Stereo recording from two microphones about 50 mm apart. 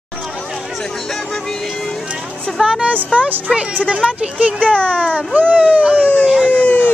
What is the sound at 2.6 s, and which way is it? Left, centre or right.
Speech, right.